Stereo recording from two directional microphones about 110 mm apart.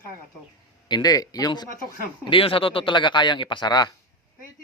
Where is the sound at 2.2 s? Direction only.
50° left (ahead or behind).